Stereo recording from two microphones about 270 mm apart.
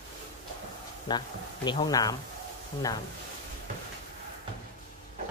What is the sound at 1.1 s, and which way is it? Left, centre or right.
Speech, centre.